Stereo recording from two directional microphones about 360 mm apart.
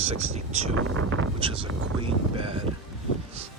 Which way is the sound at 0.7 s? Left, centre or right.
Right.